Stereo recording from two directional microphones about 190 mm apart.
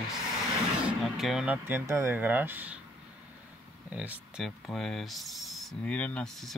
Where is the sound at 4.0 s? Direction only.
5° right (ahead or behind).